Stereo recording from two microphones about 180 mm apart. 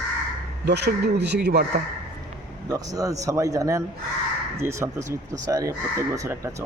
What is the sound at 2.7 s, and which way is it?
Speech, 20° right (ahead or behind).